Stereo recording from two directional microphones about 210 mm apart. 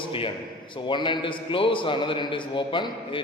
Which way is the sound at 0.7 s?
25° left (ahead or behind).